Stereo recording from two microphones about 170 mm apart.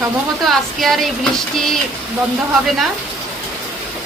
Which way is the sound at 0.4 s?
Centre (ahead or behind).